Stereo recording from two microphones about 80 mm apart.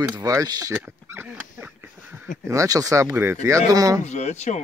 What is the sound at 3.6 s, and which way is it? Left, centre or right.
Speech, right.